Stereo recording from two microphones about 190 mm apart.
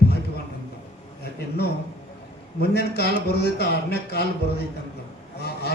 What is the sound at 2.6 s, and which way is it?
A man's voice, 60° left (ahead or behind).